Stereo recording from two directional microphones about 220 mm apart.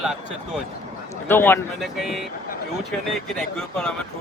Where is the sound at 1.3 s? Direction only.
10° left (ahead or behind).